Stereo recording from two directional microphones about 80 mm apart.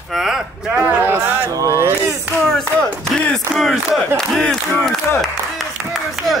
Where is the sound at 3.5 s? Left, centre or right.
Centre.